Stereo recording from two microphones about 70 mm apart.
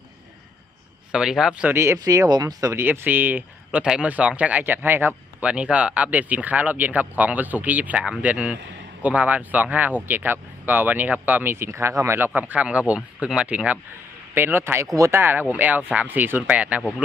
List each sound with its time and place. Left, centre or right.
1.1 s speech: centre
1.7 s speech: right
2.0 s speech: right
2.7 s speech: right
3.8 s speech: centre; by 5.1 s right
5.4 s speech: centre; by 12.3 s right
12.3 s speech: right
14.3 s speech: right